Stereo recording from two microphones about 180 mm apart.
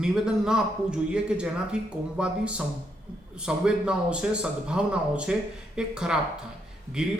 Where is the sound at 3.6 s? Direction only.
5° right (ahead or behind).